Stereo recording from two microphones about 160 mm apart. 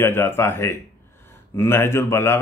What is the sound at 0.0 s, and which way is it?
Speech, 15° left (ahead or behind).